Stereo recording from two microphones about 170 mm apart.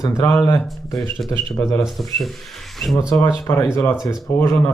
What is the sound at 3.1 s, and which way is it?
Speech, 15° left (ahead or behind).